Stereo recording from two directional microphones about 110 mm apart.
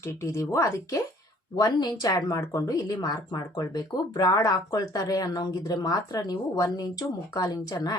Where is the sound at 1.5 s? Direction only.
40° left (ahead or behind).